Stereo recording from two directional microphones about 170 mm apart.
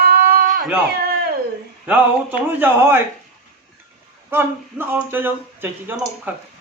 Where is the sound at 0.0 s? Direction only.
60° right (ahead or behind).